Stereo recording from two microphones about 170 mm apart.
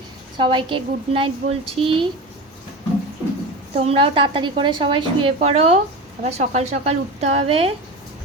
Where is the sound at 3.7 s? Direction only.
35° right (ahead or behind).